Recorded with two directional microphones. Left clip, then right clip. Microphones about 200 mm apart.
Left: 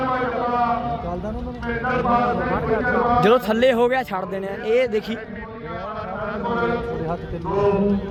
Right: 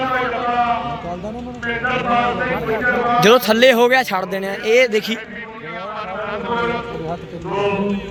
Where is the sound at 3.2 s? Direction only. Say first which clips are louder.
Right 7 dB; 15° right (ahead or behind).